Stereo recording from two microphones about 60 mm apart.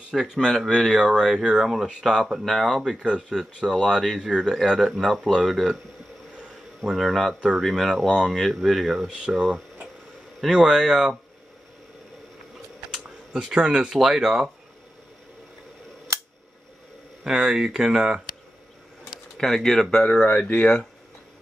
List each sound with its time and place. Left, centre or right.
0.1 s speech: centre
6.9 s speech: centre
8.1 s speech: centre
8.4 s speech: centre
9.2 s speech: centre
12.9 s speech: centre
17.2 s speech: centre
19.0 s pigeon: centre
20.0 s speech: left